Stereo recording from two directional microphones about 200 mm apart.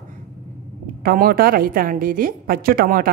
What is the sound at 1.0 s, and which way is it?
A woman's voice, 45° right (ahead or behind).